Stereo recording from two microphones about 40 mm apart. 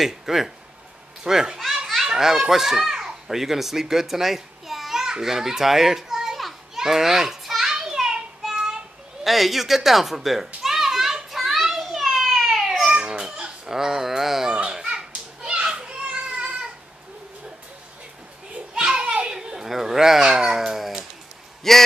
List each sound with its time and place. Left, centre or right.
0.0 s a child's voice: centre
5.2 s children playing: centre
9.2 s a child's voice: centre
11.3 s children playing: centre
12.0 s a sound: centre
12.8 s a sound: right
14.7 s children playing: centre
18.5 s children playing: right
21.7 s speech: centre